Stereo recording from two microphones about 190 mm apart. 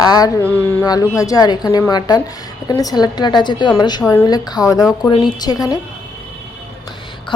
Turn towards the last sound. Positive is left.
turn(degrees=20)  # may be behind; listen again after turning